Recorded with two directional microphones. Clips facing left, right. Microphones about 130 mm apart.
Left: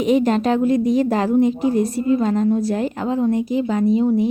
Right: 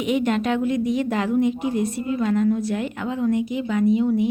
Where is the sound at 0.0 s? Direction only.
35° left (ahead or behind).